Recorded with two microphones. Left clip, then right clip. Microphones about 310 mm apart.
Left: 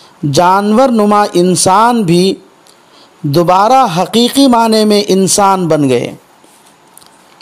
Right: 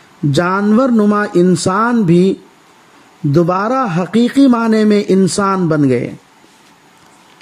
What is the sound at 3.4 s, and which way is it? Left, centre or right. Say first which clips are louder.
A man's voice: left 7 dB; left.